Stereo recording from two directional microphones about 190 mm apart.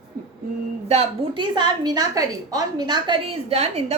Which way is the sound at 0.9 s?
30° right (ahead or behind).